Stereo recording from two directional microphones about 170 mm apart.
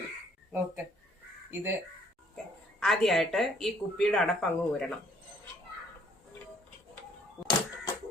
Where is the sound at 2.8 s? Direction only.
Centre (ahead or behind).